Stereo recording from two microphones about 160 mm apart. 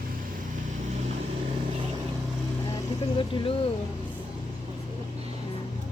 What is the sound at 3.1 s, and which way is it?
Speech, 30° left (ahead or behind).